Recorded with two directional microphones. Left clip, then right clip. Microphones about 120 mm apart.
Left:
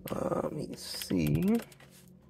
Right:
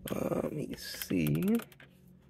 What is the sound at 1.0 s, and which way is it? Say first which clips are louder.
Speech: left 1 dB; 45° left (ahead or behind).